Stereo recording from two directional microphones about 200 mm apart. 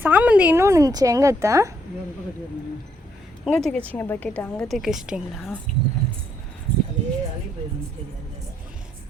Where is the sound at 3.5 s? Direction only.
5° left (ahead or behind).